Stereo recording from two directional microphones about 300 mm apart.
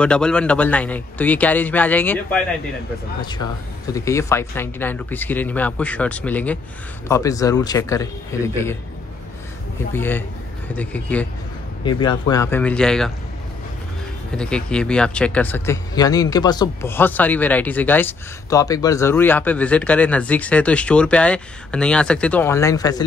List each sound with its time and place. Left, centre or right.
0.0 s a man's voice: centre
9.9 s a man's voice: centre
11.8 s a man's voice: centre
14.3 s speech: centre